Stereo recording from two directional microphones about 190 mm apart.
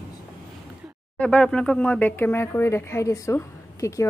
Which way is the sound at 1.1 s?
5° left (ahead or behind).